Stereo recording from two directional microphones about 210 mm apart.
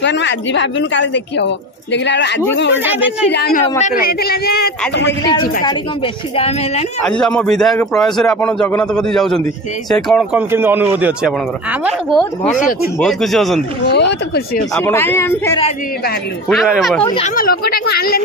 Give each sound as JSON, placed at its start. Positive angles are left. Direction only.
{"t": 0.0, "sound": "speech", "side_deg": 55}
{"t": 2.8, "sound": "speech", "side_deg": -10}
{"t": 3.3, "sound": "a man's voice", "side_deg": 50}
{"t": 6.3, "sound": "a woman's voice", "side_deg": 30}
{"t": 7.1, "sound": "a man's voice", "side_deg": 5}
{"t": 10.5, "sound": "a man's voice", "side_deg": -10}
{"t": 13.8, "sound": "a man's voice", "side_deg": 50}
{"t": 14.8, "sound": "speech", "side_deg": 10}
{"t": 16.4, "sound": "a man's voice", "side_deg": 0}
{"t": 17.0, "sound": "a woman's voice", "side_deg": 25}
{"t": 17.4, "sound": "a man's voice", "side_deg": 45}